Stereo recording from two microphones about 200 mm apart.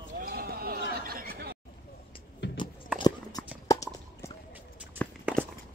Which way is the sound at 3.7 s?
15° left (ahead or behind).